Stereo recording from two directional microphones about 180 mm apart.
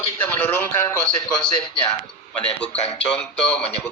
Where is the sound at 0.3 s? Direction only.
10° left (ahead or behind).